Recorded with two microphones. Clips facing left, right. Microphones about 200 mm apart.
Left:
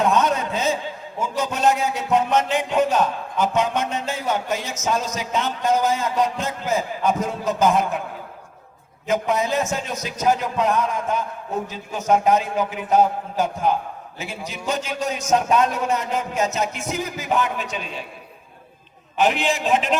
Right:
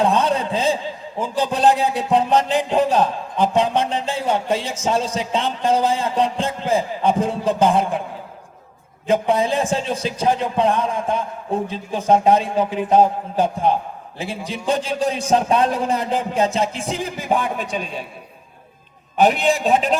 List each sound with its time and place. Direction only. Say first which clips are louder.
0.0 s a sound: right 2 dB; 30° right (ahead or behind)
1.2 s music: right 3 dB; 30° right (ahead or behind)
9.0 s music: right 4 dB; 30° right (ahead or behind)
19.1 s music: right 4 dB; 35° right (ahead or behind)